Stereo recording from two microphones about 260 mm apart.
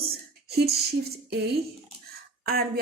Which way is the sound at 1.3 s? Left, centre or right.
Right.